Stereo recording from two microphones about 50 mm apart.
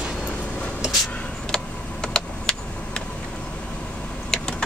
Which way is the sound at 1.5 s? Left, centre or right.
Centre.